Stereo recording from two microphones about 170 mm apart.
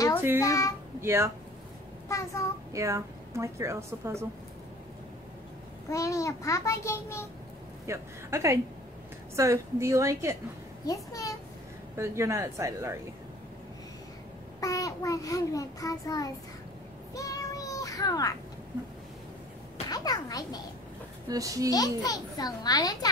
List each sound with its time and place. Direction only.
0.4 s a child's voice: 20° left (ahead or behind)
1.0 s a woman's voice: 15° right (ahead or behind)
2.0 s a child's voice: 20° left (ahead or behind)
2.7 s a woman's voice: 15° right (ahead or behind)
5.9 s a child's voice: 20° left (ahead or behind)
7.8 s a woman's voice: 15° right (ahead or behind)
10.9 s a child's voice: 20° left (ahead or behind)
12.0 s a woman's voice: 15° right (ahead or behind)
14.6 s a child's voice: 20° left (ahead or behind)
17.1 s child singing: 20° left (ahead or behind)
19.9 s a child's voice: 20° left (ahead or behind)
21.3 s a child's voice: 20° right (ahead or behind)
21.6 s a child's voice: 20° left (ahead or behind)